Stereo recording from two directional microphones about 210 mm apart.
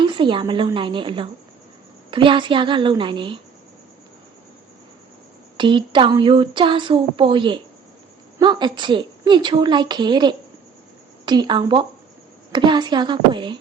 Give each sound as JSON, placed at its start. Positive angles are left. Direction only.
{"t": 0.0, "sound": "speech", "side_deg": -25}
{"t": 5.5, "sound": "speech", "side_deg": -25}